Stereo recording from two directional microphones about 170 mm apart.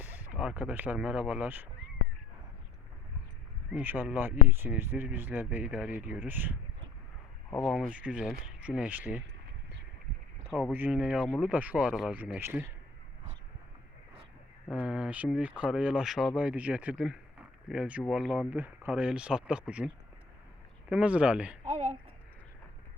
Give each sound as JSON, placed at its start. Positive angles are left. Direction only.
{"t": 0.0, "sound": "speech", "side_deg": -5}
{"t": 3.7, "sound": "speech", "side_deg": -10}
{"t": 7.6, "sound": "speech", "side_deg": 5}
{"t": 7.9, "sound": "speech", "side_deg": -10}
{"t": 10.5, "sound": "speech", "side_deg": -5}
{"t": 14.7, "sound": "speech", "side_deg": -5}
{"t": 20.9, "sound": "speech", "side_deg": -5}
{"t": 21.7, "sound": "a sound", "side_deg": -40}